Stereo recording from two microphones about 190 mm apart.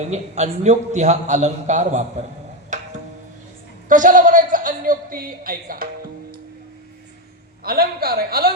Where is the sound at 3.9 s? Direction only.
45° right (ahead or behind).